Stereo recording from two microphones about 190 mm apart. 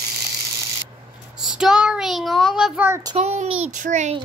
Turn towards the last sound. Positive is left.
turn(degrees=-40)  # may be behind; listen again after turning